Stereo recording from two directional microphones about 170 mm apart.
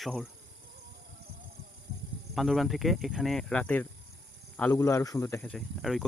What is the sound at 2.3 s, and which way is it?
Speech, centre (ahead or behind).